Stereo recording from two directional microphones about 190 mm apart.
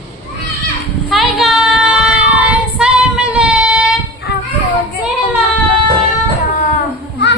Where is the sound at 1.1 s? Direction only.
Centre (ahead or behind).